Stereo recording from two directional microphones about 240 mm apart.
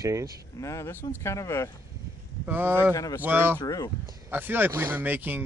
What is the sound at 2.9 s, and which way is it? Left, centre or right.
Speech, centre.